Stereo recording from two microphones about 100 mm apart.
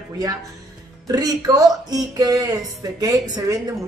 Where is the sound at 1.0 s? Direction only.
40° right (ahead or behind).